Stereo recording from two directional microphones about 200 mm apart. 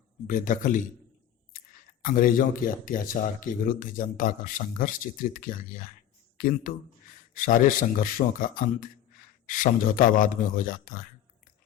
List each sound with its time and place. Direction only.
0.3 s speech: 40° left (ahead or behind)